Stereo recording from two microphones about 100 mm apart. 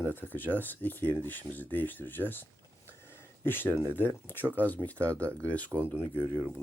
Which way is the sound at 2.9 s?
25° left (ahead or behind).